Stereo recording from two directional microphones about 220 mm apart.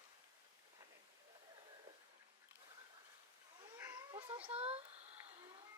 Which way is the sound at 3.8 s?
15° right (ahead or behind).